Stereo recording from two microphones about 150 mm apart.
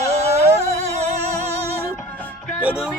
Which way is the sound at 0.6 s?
45° right (ahead or behind).